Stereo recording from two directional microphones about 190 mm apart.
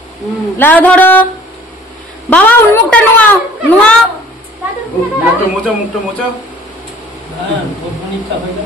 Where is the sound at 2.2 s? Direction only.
5° left (ahead or behind).